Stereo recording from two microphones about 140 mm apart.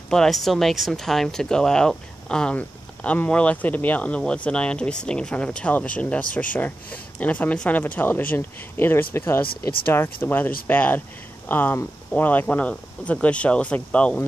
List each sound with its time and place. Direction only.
0.1 s speech: 5° left (ahead or behind)